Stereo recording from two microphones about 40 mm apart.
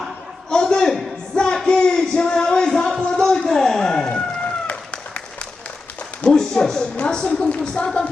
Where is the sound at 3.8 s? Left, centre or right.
Centre.